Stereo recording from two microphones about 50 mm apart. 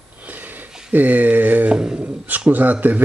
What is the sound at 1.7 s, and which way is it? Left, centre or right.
Speech, centre.